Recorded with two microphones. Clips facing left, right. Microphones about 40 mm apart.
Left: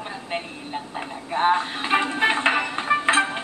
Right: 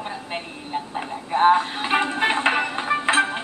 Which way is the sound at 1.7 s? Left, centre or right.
Centre.